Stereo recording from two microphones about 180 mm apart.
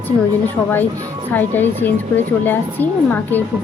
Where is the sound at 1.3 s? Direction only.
10° left (ahead or behind).